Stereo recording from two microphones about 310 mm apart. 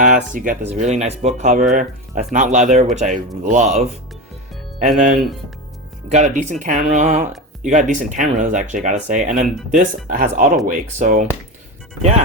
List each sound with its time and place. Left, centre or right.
0.0 s speech: right
6.1 s speech: right